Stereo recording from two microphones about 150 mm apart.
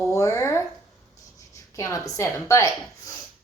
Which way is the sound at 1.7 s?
20° left (ahead or behind).